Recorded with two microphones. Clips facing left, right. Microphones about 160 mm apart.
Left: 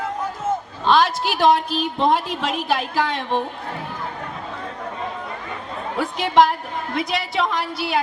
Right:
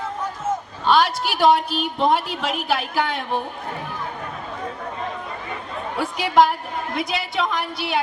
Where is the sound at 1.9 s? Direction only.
5° right (ahead or behind).